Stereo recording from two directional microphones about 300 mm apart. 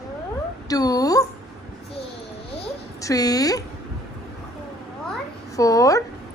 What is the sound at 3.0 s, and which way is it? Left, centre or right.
Speech, centre.